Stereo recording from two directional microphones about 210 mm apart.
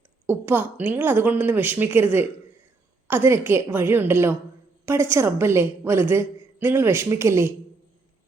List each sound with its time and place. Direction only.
0.3 s a woman's voice: 10° right (ahead or behind)